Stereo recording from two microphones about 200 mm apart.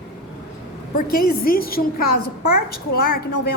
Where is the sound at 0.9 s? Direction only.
45° left (ahead or behind).